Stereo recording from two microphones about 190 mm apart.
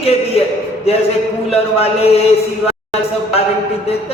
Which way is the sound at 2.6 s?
30° left (ahead or behind).